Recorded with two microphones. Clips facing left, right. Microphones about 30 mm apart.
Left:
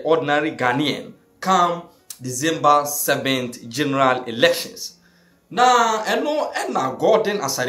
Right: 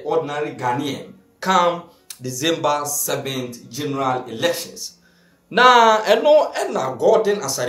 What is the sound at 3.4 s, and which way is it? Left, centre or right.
Speech, left.